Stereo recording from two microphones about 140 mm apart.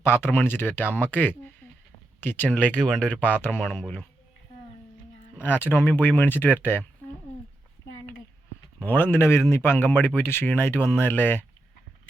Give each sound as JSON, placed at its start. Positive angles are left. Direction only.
{"t": 0.0, "sound": "speech", "side_deg": 15}
{"t": 5.4, "sound": "speech", "side_deg": 15}
{"t": 8.8, "sound": "speech", "side_deg": 15}